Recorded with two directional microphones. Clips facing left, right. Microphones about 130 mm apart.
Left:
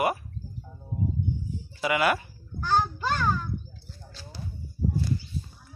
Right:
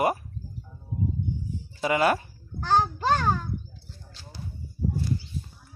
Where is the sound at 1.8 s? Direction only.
35° right (ahead or behind).